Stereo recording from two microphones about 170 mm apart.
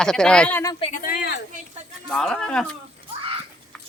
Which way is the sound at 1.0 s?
65° left (ahead or behind).